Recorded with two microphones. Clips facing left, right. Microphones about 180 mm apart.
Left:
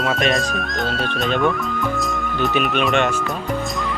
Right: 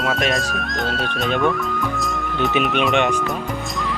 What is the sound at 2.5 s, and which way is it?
Speech, 20° right (ahead or behind).